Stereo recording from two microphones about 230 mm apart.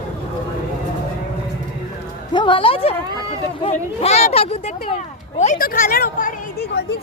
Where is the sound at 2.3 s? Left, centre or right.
Left.